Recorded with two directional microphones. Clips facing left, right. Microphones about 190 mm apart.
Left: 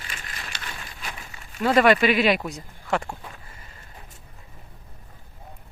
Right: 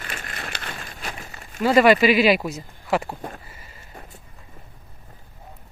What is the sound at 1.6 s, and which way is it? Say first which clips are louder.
Speech: right 3 dB; 5° right (ahead or behind).